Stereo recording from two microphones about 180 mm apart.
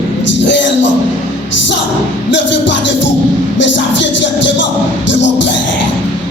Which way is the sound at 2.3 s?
85° left.